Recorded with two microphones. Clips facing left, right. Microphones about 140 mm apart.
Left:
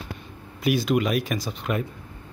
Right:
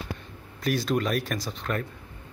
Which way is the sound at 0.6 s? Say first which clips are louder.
Left 4 dB; 5° left (ahead or behind).